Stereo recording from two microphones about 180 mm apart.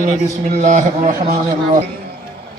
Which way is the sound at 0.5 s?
45° right (ahead or behind).